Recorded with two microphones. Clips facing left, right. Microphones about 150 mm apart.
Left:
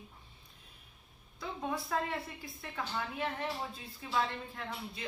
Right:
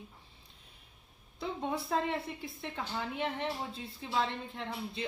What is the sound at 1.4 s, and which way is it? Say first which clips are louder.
A woman's voice: right 2 dB; 25° right (ahead or behind).